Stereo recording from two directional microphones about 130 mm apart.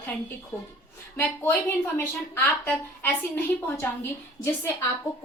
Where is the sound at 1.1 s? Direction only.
15° left (ahead or behind).